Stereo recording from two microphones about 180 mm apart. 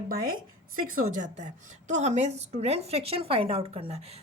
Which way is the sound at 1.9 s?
40° right (ahead or behind).